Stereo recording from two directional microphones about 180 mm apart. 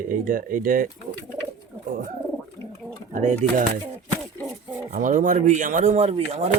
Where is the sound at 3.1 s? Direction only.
45° right (ahead or behind).